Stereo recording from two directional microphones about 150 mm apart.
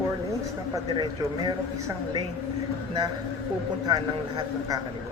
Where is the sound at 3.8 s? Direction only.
25° right (ahead or behind).